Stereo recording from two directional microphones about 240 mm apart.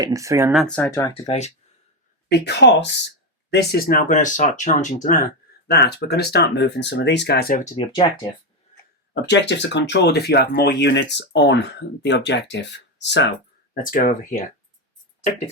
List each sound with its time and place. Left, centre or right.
0.0 s speech: centre
1.1 s speech: left
2.3 s speech: left
7.8 s speech: centre
9.3 s speech: left
13.9 s speech: left